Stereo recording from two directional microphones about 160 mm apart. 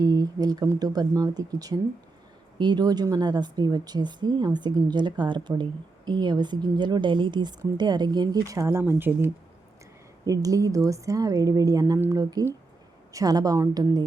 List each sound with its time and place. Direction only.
0.0 s speech: 25° right (ahead or behind)